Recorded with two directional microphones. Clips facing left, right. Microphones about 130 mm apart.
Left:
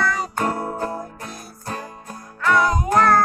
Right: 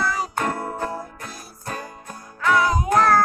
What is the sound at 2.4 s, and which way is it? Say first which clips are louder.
Music: left 1 dB; centre (ahead or behind).